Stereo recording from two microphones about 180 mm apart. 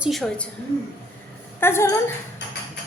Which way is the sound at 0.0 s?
Centre (ahead or behind).